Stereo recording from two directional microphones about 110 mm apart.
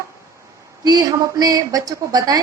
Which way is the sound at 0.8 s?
35° right (ahead or behind).